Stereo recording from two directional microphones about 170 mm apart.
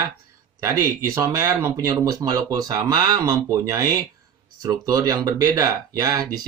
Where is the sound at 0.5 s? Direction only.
15° right (ahead or behind).